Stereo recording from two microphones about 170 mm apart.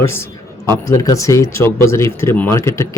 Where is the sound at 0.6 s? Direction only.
20° left (ahead or behind).